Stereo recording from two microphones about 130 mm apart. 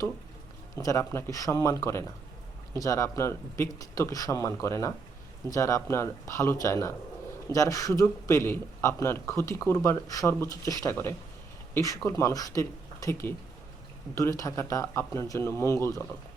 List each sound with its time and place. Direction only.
0.8 s a man's voice: 25° left (ahead or behind)